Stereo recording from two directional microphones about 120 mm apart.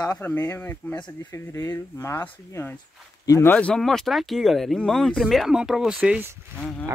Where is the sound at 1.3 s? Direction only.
25° left (ahead or behind).